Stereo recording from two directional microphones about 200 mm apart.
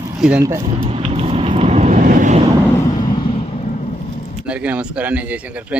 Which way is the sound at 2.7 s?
20° left (ahead or behind).